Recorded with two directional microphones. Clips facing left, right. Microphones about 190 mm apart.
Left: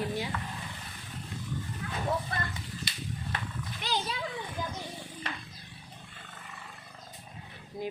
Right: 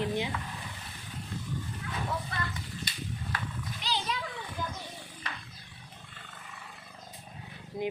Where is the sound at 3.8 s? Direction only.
50° left (ahead or behind).